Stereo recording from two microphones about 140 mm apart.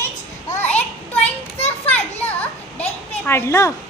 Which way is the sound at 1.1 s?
45° left (ahead or behind).